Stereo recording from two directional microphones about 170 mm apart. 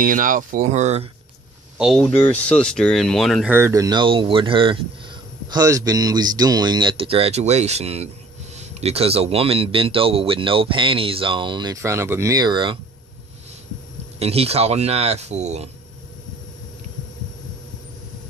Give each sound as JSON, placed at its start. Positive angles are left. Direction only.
{"t": 0.0, "sound": "speech", "side_deg": -50}
{"t": 1.8, "sound": "speech", "side_deg": 0}
{"t": 2.0, "sound": "speech", "side_deg": 10}
{"t": 3.4, "sound": "a man's voice", "side_deg": -15}
{"t": 14.2, "sound": "a man's voice", "side_deg": -35}